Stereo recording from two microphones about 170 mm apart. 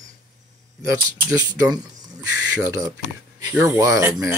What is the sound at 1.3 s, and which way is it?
Speech, 20° right (ahead or behind).